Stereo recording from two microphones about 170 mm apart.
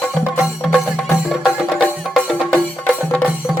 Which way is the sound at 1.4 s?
Centre (ahead or behind).